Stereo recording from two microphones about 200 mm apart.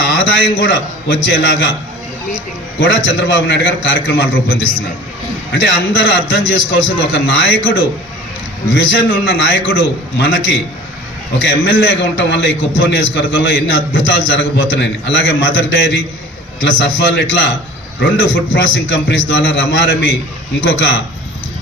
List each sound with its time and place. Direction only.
0.0 s a sound: 65° left (ahead or behind)
1.2 s a man's voice: 60° left (ahead or behind)
2.8 s a man's voice: 60° left (ahead or behind)
8.7 s a man's voice: 65° left (ahead or behind)